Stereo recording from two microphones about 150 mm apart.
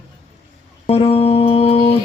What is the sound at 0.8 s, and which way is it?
Music, 40° left (ahead or behind).